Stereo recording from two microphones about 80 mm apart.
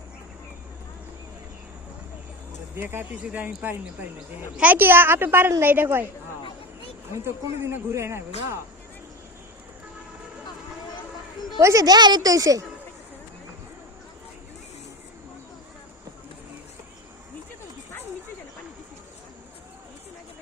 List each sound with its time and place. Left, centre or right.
2.7 s speech: right
7.1 s speech: right
11.6 s a woman's voice: right
12.3 s a woman's voice: right